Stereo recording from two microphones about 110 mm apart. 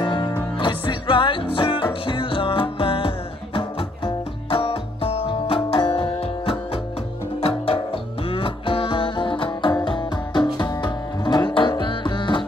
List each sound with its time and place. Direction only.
0.0 s music: 45° left (ahead or behind)